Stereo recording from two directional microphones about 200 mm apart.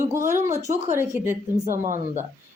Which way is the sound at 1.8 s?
40° right (ahead or behind).